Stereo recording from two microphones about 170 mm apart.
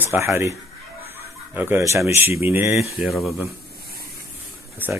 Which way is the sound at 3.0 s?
Centre (ahead or behind).